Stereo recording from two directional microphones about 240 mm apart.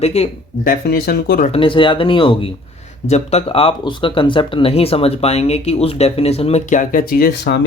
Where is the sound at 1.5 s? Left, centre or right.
Left.